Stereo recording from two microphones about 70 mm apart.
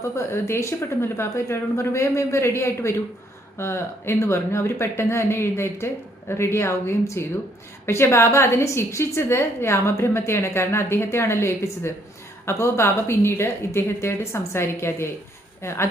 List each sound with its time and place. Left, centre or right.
0.2 s a woman's voice: left